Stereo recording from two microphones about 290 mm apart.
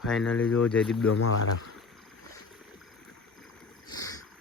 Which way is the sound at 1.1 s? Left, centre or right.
Left.